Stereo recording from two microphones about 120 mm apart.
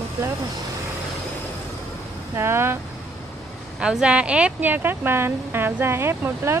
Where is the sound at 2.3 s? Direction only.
20° right (ahead or behind).